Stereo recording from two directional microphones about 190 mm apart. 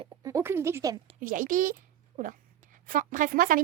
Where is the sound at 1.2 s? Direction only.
45° right (ahead or behind).